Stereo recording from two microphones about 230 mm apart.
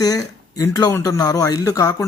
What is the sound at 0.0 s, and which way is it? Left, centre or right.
Speech, centre.